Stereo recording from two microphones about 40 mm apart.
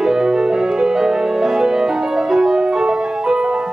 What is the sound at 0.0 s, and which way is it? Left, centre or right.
Music, centre.